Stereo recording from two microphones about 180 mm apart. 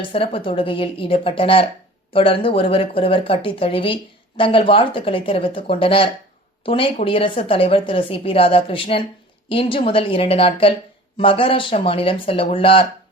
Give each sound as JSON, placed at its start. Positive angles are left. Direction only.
{"t": 0.0, "sound": "a woman's voice", "side_deg": 30}